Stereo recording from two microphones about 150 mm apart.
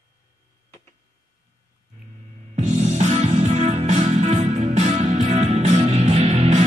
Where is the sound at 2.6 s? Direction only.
50° right (ahead or behind).